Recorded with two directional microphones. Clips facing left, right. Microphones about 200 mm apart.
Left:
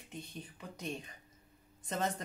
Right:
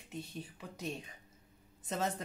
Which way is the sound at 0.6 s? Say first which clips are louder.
Left 1 dB; 5° right (ahead or behind).